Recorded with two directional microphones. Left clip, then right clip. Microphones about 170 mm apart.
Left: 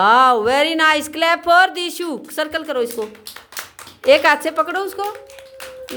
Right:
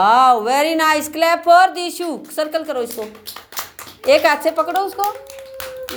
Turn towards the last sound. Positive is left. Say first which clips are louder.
# right 2 dB
turn(degrees=40)  # may be behind; listen again after turning